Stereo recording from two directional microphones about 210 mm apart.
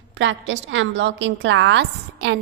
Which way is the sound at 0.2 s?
60° right (ahead or behind).